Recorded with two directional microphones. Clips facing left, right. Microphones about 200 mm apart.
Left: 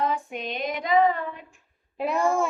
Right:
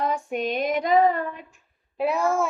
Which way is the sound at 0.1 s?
45° right (ahead or behind).